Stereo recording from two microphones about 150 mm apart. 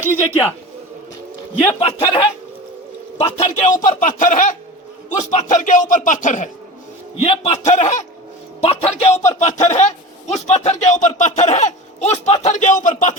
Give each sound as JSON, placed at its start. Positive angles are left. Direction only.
{"t": 0.1, "sound": "a man's voice", "side_deg": 15}
{"t": 1.8, "sound": "a man's voice", "side_deg": 40}
{"t": 3.8, "sound": "music", "side_deg": 55}
{"t": 7.3, "sound": "speech", "side_deg": 40}
{"t": 8.6, "sound": "a man's voice", "side_deg": 40}
{"t": 9.4, "sound": "speech", "side_deg": 55}